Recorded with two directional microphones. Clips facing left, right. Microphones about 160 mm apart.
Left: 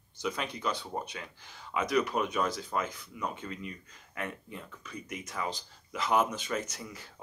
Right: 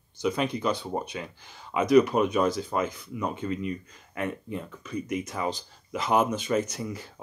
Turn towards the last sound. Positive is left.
turn(degrees=-20)  # may be behind; listen again after turning